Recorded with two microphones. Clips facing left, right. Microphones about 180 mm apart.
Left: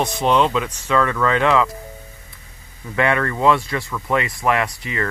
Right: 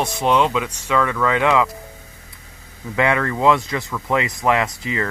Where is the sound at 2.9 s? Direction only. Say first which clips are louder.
Even; 20° right (ahead or behind).